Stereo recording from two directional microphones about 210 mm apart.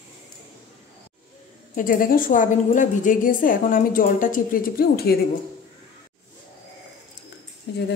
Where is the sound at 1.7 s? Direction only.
40° left (ahead or behind).